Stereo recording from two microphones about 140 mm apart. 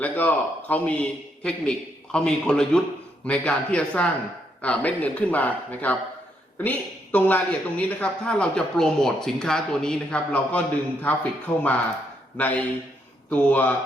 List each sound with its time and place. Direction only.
0.0 s a man's voice: 10° left (ahead or behind)